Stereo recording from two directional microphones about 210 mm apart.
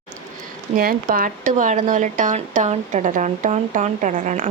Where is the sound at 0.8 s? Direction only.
45° right (ahead or behind).